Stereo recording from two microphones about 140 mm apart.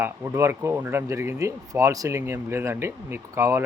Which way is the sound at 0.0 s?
20° right (ahead or behind).